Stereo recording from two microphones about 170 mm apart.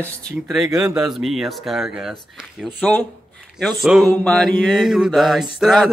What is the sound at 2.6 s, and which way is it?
Speech, 10° left (ahead or behind).